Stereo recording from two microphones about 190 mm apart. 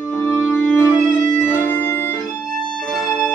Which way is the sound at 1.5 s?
10° left (ahead or behind).